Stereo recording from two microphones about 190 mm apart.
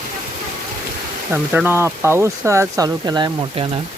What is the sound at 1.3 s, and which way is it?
Speech, 10° right (ahead or behind).